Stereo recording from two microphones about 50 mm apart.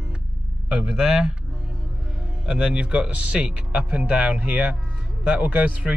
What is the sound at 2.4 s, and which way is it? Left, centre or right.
Speech, centre.